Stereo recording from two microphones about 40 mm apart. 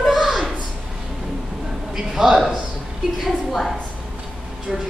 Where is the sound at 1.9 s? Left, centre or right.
Centre.